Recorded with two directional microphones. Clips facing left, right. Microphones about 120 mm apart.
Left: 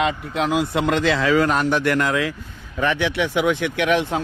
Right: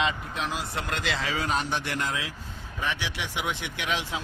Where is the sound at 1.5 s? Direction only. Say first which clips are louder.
Left 9 dB; 60° left (ahead or behind); by 2.3 s 75° left (ahead or behind).